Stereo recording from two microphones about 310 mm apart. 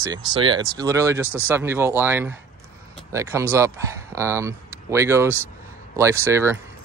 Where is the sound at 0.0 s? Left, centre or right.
Centre.